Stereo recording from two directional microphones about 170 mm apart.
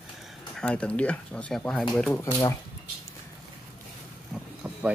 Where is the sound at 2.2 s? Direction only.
20° left (ahead or behind).